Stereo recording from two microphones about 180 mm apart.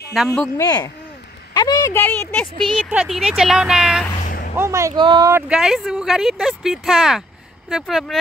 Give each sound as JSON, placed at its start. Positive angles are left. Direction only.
{"t": 0.1, "sound": "speech", "side_deg": 0}
{"t": 0.6, "sound": "speech", "side_deg": 20}
{"t": 4.2, "sound": "vehicle", "side_deg": 50}
{"t": 4.6, "sound": "speech", "side_deg": -15}
{"t": 5.3, "sound": "speech", "side_deg": -5}